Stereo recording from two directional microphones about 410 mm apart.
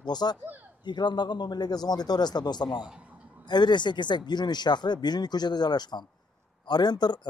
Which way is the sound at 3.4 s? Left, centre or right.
Centre.